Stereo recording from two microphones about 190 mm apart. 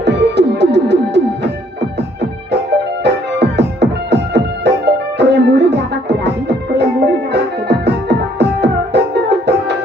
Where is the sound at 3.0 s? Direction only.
65° right (ahead or behind).